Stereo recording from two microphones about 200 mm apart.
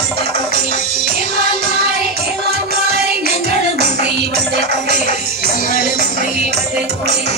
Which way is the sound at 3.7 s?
55° right (ahead or behind).